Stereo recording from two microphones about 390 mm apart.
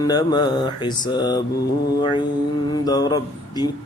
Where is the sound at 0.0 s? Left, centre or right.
Centre.